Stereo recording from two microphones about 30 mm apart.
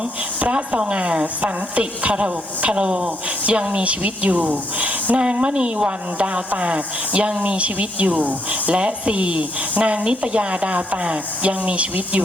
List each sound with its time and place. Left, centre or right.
0.3 s a woman's voice: right
5.1 s a woman's voice: right
9.8 s speech: right